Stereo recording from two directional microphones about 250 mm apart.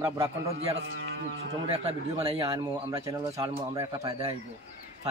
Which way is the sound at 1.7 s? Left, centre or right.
Right.